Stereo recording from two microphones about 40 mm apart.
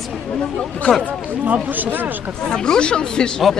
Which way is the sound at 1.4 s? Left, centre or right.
Right.